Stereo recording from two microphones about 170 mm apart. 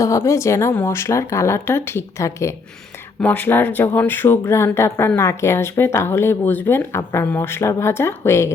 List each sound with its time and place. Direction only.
0.0 s speech: 15° left (ahead or behind)